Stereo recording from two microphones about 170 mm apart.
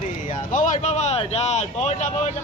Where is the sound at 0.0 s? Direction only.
45° left (ahead or behind).